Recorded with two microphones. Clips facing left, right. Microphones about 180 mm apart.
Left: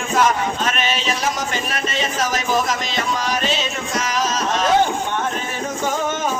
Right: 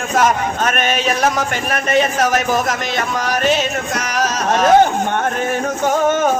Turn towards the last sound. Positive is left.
turn(degrees=-55)  # may be behind; listen again after turning